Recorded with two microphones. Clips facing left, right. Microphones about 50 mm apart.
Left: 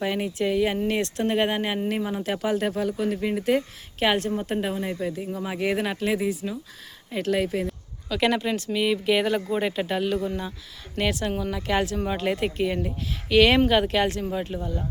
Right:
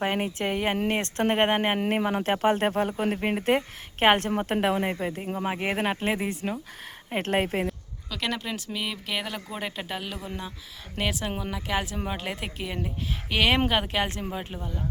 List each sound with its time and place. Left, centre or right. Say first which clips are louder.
0.0 s speech: left 1 dB; right
4.9 s speech: left 1 dB; right
8.1 s speech: left 7 dB; centre
13.3 s speech: left 5 dB; centre